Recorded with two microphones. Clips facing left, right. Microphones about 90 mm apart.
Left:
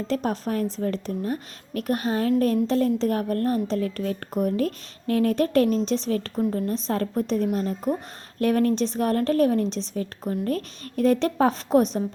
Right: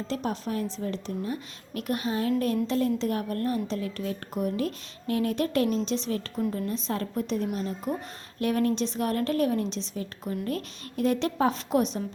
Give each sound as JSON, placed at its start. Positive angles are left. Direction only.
{"t": 0.1, "sound": "a woman's voice", "side_deg": 45}